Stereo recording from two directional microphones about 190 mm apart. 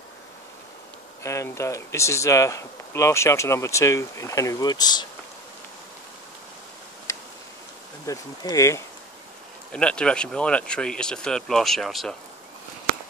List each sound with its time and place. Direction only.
1.2 s speech: 15° left (ahead or behind)
8.1 s speech: 20° left (ahead or behind)
9.7 s speech: 5° left (ahead or behind)